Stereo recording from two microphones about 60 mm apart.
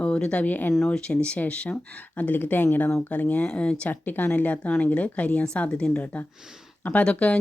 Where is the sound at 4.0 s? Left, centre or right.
Left.